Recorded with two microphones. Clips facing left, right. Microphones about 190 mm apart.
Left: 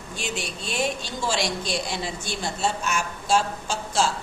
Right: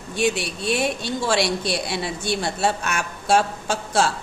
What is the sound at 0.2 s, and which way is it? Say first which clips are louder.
Speech: right 10 dB; 65° right (ahead or behind).